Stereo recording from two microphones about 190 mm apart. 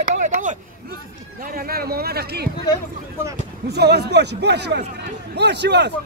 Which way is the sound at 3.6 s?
60° right (ahead or behind).